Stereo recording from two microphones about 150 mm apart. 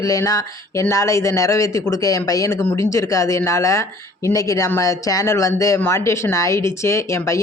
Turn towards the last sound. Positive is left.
turn(degrees=20)  # may be behind; listen again after turning